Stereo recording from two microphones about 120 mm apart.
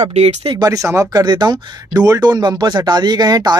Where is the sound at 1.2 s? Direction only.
35° right (ahead or behind).